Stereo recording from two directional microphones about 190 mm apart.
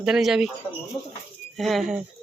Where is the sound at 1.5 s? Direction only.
Centre (ahead or behind).